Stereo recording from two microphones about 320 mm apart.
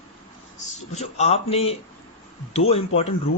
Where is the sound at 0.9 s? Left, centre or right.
Centre.